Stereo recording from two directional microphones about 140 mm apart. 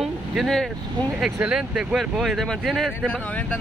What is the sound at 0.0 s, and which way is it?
Vehicle, centre (ahead or behind).